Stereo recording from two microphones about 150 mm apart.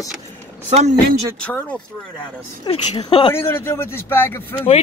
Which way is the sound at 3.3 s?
15° left (ahead or behind).